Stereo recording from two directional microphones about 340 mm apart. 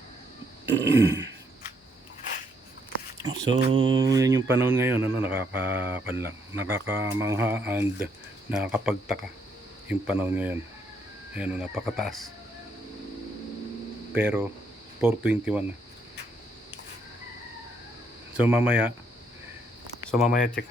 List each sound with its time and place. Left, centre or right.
0.6 s a sound: right
3.7 s speech: centre
14.1 s speech: centre
18.3 s speech: centre
20.1 s speech: centre
20.3 s speech: left